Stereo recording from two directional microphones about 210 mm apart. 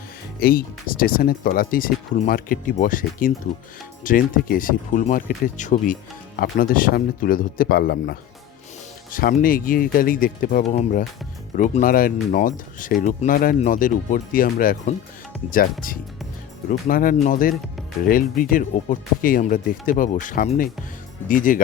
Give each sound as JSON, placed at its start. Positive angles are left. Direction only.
{"t": 0.3, "sound": "speech", "side_deg": 45}